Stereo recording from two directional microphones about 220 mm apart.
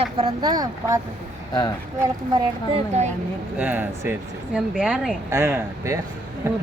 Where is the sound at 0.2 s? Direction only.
20° right (ahead or behind).